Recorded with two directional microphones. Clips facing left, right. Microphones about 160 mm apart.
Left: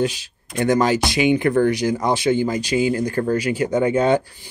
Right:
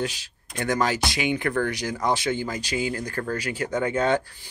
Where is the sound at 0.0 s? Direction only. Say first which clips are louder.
Left 8 dB; 20° left (ahead or behind).